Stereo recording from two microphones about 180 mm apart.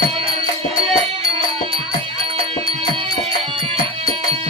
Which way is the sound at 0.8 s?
30° right (ahead or behind).